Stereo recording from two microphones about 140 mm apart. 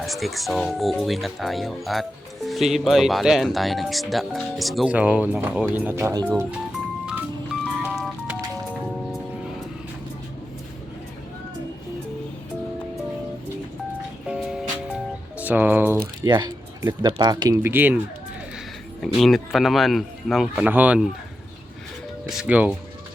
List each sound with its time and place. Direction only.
0.0 s speech: centre (ahead or behind); by 6.1 s 15° right (ahead or behind)
7.0 s music: 10° right (ahead or behind)
14.3 s music: 5° right (ahead or behind)
16.2 s speech: 30° right (ahead or behind)
17.6 s speech: 15° right (ahead or behind)
19.0 s speech: centre (ahead or behind)
20.7 s speech: 10° right (ahead or behind)
22.3 s speech: 5° right (ahead or behind)